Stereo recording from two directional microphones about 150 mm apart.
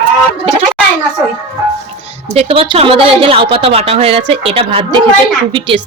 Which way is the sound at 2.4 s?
40° right (ahead or behind).